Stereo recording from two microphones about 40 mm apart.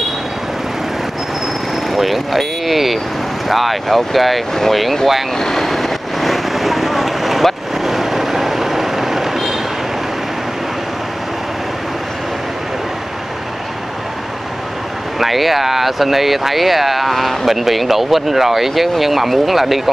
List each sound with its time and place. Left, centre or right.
1.9 s speech: centre
5.4 s vehicle: centre
15.1 s speech: centre